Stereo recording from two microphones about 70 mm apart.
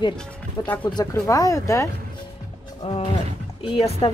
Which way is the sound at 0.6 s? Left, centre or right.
Left.